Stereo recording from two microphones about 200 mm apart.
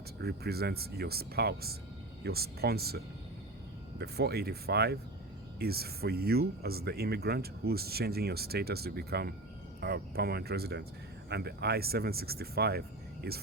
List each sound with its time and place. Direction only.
0.2 s speech: 55° right (ahead or behind)